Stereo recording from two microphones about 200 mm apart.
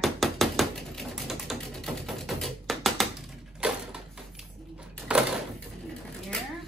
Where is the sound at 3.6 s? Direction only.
5° right (ahead or behind).